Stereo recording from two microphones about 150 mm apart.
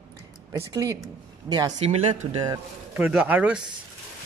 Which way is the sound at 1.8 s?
40° right (ahead or behind).